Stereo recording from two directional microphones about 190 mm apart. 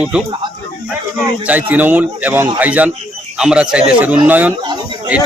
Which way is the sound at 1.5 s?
10° right (ahead or behind).